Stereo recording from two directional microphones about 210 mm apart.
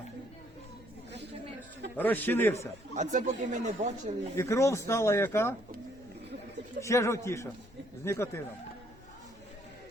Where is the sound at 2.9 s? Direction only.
35° right (ahead or behind).